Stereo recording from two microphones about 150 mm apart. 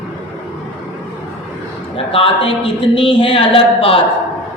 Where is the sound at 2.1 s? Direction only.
40° left (ahead or behind).